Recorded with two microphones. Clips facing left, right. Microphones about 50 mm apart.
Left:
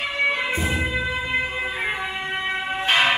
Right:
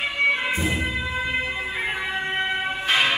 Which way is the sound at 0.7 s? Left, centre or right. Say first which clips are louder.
Left 1 dB; centre.